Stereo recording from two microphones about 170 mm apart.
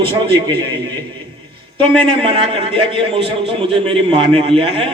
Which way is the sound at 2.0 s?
30° right (ahead or behind).